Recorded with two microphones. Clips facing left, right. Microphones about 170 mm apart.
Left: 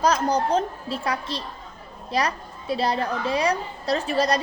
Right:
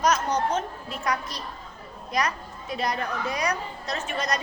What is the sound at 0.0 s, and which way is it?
A woman's voice, 35° left (ahead or behind).